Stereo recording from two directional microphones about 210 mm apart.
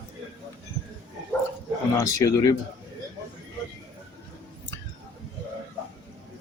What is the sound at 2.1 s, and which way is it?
Speech, 15° left (ahead or behind).